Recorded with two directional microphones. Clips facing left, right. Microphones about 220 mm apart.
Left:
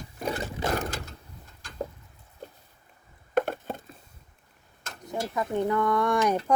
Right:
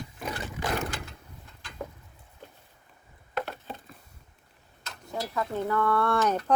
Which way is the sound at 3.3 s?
50° left (ahead or behind).